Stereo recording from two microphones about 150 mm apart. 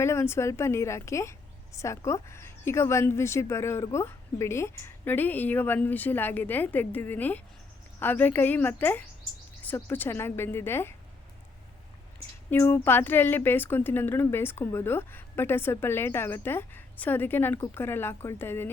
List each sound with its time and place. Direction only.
0.0 s a woman's voice: 15° left (ahead or behind)
12.5 s a woman's voice: 15° left (ahead or behind)